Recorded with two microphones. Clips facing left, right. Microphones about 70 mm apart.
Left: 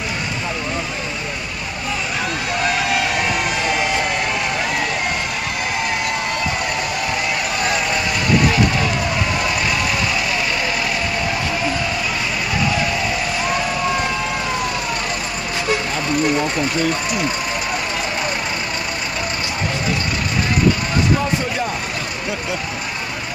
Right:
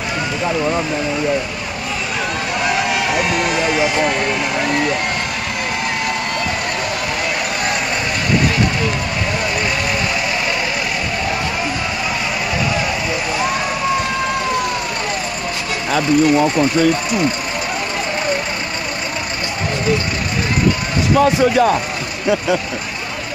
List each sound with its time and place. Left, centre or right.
21.2 s speech: right